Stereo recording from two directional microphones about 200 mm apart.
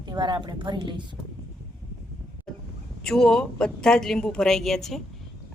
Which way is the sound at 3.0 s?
Centre (ahead or behind).